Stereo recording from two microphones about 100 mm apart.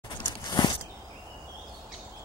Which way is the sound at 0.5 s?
45° left (ahead or behind).